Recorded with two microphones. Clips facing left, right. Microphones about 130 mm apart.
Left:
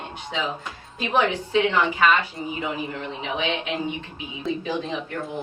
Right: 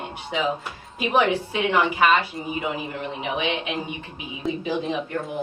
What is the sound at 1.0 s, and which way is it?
A woman's voice, 15° right (ahead or behind).